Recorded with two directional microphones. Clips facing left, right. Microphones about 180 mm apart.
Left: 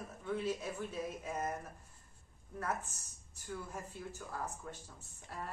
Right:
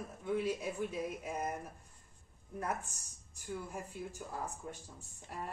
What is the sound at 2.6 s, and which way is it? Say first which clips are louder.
A man's voice: even; 15° right (ahead or behind).